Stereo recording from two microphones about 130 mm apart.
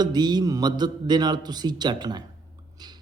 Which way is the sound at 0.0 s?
35° right (ahead or behind).